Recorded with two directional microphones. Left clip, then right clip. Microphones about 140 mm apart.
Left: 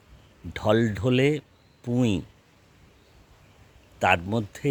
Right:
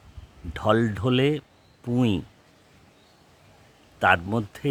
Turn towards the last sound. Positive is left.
turn(degrees=0)  # may be behind; listen again after turning